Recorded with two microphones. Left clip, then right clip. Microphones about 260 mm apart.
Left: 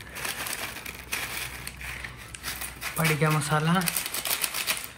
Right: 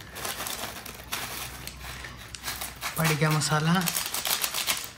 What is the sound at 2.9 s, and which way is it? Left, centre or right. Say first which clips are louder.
Speech: left 1 dB; centre.